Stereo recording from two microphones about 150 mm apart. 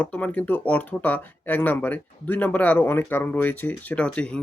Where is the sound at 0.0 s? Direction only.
10° left (ahead or behind).